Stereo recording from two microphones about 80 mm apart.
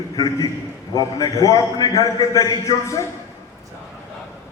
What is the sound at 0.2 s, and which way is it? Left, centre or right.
A man's voice, left.